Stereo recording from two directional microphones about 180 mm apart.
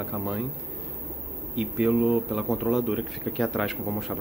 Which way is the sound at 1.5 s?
Centre (ahead or behind).